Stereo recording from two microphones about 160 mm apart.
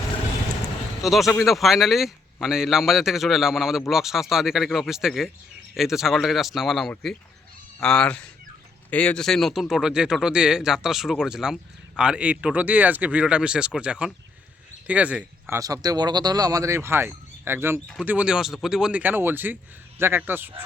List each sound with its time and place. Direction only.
1.0 s speech: centre (ahead or behind)
15.5 s speech: 20° right (ahead or behind)